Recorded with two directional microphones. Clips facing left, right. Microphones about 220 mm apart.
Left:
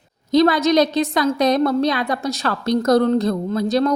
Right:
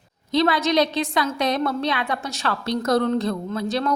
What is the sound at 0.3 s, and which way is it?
A woman's voice, 40° left (ahead or behind).